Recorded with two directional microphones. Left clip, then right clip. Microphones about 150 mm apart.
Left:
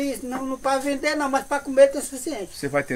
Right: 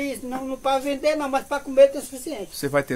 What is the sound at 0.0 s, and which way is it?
Speech, 5° left (ahead or behind).